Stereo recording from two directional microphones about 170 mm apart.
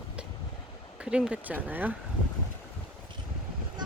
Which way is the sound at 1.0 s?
5° right (ahead or behind).